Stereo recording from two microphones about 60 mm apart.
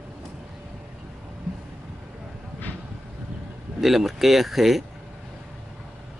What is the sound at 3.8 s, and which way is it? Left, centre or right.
Speech, centre.